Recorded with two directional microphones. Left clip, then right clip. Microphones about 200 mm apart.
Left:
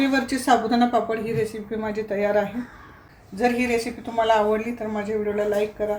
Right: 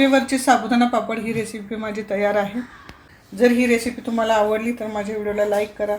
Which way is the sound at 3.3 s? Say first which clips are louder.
Right 5 dB; 40° right (ahead or behind).